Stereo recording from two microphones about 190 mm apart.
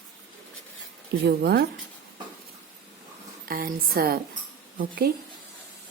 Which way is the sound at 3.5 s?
50° right (ahead or behind).